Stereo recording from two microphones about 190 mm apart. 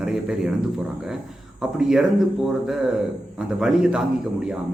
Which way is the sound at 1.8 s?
5° right (ahead or behind).